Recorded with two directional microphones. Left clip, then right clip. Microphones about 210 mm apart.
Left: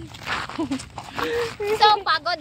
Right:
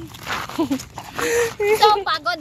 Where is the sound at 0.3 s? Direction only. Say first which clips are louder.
Right 1 dB; 10° right (ahead or behind).